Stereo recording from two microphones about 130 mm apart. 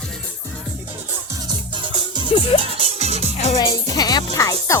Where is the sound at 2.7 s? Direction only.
50° right (ahead or behind).